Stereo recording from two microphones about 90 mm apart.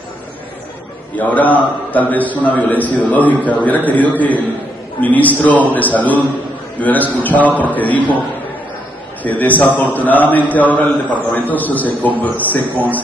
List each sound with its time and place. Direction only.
1.1 s a man's voice: 15° left (ahead or behind)
9.2 s a man's voice: 20° left (ahead or behind)